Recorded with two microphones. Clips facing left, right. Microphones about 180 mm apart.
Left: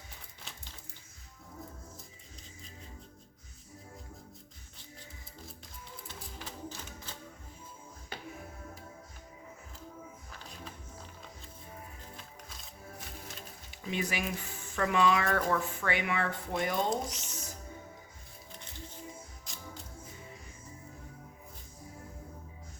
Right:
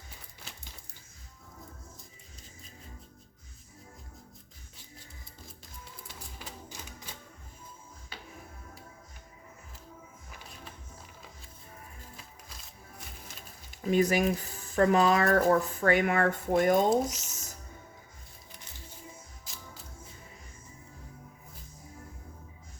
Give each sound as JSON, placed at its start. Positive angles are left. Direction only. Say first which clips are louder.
{"t": 6.7, "sound": "typewriter", "louder": "left 2 dB", "side_deg": -15}
{"t": 13.7, "sound": "speech", "louder": "right 10 dB", "side_deg": -45}
{"t": 16.9, "sound": "speech", "louder": "right 7 dB", "side_deg": -5}